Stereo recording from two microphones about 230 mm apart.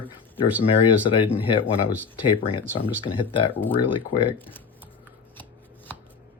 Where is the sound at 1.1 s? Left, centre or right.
Left.